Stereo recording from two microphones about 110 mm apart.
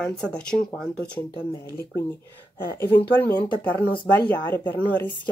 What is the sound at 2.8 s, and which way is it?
Speech, 20° left (ahead or behind).